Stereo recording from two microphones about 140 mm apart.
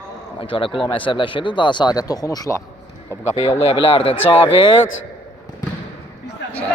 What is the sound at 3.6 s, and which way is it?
Speech, 40° left (ahead or behind).